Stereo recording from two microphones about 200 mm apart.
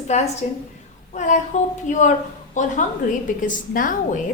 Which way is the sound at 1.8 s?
40° left (ahead or behind).